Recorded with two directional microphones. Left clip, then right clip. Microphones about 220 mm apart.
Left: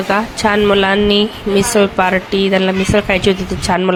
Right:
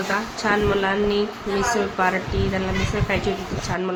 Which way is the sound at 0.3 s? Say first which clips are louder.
Left 8 dB; 40° left (ahead or behind).